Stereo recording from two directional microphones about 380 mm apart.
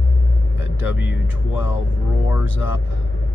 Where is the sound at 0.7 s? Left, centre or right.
Left.